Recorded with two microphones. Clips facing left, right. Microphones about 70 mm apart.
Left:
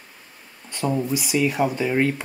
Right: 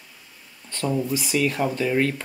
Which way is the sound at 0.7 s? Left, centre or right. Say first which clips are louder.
Left 1 dB; centre.